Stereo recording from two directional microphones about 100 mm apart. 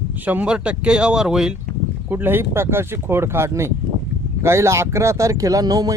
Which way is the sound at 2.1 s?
20° right (ahead or behind).